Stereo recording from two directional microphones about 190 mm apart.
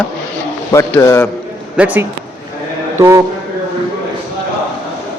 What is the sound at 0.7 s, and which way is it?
Speech, 15° left (ahead or behind).